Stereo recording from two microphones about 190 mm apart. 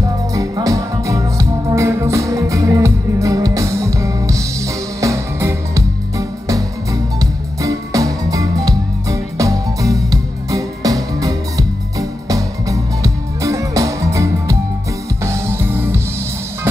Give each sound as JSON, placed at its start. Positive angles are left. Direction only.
{"t": 0.3, "sound": "music", "side_deg": -15}